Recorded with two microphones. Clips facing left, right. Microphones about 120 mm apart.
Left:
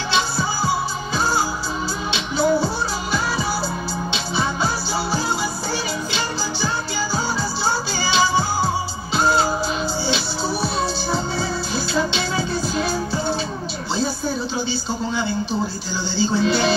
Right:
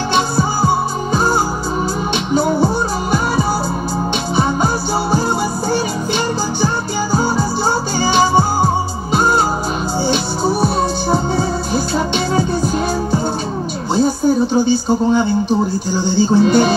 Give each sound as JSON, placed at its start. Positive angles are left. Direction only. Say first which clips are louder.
{"t": 0.1, "sound": "music", "louder": "right 5 dB", "side_deg": -45}
{"t": 5.7, "sound": "music", "louder": "right 8 dB", "side_deg": -50}
{"t": 14.5, "sound": "speech", "louder": "right 11 dB", "side_deg": -50}
{"t": 15.9, "sound": "music", "louder": "right 8 dB", "side_deg": -50}